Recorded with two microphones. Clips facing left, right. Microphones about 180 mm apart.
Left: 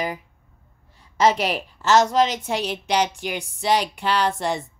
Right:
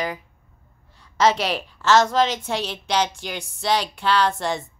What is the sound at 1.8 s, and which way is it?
A woman's voice, 15° left (ahead or behind).